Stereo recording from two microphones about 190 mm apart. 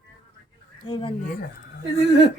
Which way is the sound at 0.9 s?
25° left (ahead or behind).